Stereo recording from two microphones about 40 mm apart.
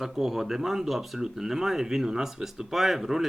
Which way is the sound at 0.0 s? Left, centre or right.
Centre.